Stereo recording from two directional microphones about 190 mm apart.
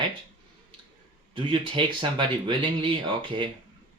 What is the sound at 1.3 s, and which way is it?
Speech, 25° right (ahead or behind).